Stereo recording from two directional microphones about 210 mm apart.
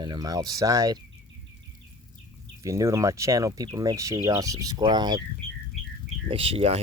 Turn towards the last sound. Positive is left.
turn(degrees=-30)  # may be behind; listen again after turning